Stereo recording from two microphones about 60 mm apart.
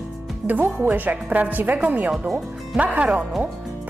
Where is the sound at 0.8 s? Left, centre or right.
Right.